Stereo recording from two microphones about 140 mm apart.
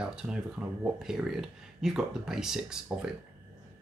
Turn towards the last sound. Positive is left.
turn(degrees=-5)  # may be behind; listen again after turning